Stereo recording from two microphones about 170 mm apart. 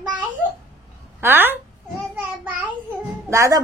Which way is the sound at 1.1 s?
10° right (ahead or behind).